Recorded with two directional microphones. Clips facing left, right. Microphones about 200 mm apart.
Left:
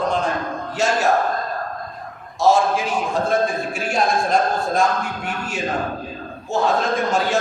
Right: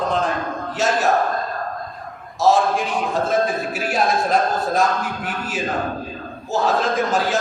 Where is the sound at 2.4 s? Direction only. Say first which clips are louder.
Even; centre (ahead or behind).